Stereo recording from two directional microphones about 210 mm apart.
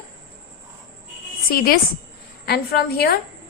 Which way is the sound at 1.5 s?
45° left (ahead or behind).